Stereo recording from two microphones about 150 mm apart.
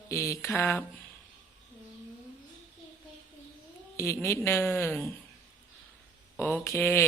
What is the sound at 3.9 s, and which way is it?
A woman's voice, 20° left (ahead or behind).